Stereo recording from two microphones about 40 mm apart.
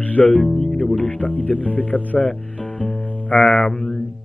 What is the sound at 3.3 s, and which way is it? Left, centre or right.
Speech, left.